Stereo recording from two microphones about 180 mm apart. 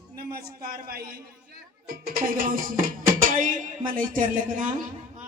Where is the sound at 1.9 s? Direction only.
50° right (ahead or behind).